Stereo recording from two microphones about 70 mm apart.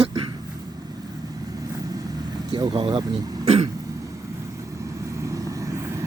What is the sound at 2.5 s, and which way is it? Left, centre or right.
Speech, right.